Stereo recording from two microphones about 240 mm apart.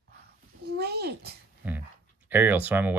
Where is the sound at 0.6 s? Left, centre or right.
Right.